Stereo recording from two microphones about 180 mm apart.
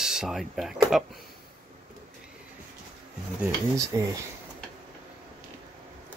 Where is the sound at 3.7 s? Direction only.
20° right (ahead or behind).